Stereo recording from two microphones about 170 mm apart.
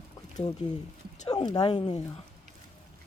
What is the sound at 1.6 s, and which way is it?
Speech, 30° left (ahead or behind).